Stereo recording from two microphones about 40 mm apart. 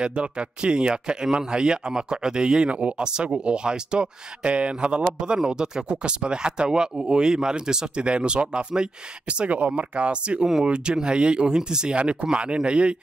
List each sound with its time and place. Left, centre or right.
0.0 s speech: right